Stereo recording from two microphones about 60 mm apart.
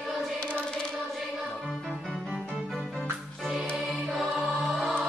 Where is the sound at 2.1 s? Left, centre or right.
Centre.